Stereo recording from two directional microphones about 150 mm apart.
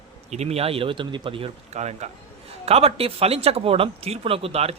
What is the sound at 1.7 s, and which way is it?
Speech, 50° right (ahead or behind).